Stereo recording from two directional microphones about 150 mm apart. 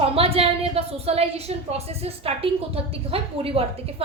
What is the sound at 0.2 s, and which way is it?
A woman's voice, 40° right (ahead or behind).